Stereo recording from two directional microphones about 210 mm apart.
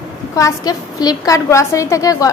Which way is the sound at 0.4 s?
20° left (ahead or behind).